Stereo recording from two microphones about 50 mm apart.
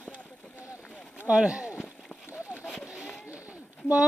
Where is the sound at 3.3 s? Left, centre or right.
Right.